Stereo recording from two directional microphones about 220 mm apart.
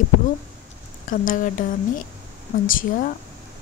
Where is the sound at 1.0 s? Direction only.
35° left (ahead or behind).